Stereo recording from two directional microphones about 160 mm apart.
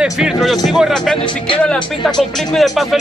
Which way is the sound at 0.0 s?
Centre (ahead or behind).